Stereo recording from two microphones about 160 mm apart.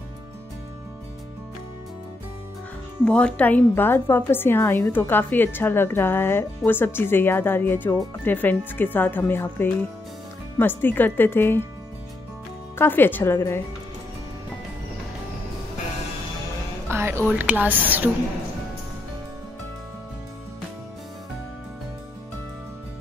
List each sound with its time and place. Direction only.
3.1 s a woman's voice: 5° left (ahead or behind)
12.7 s a woman's voice: 15° left (ahead or behind)
16.9 s speech: 15° right (ahead or behind)